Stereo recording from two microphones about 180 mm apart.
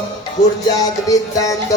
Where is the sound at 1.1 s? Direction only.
20° left (ahead or behind).